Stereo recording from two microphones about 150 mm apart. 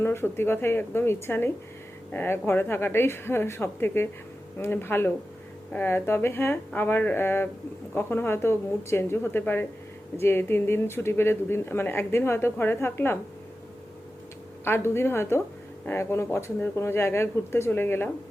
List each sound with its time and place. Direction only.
0.0 s speech: 15° left (ahead or behind)
14.6 s speech: 15° left (ahead or behind)